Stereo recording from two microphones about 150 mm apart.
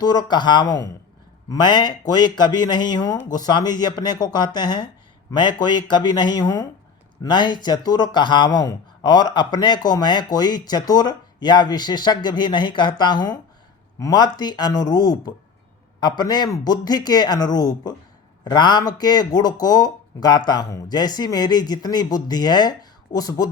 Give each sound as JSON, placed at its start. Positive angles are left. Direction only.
{"t": 0.0, "sound": "speech", "side_deg": 30}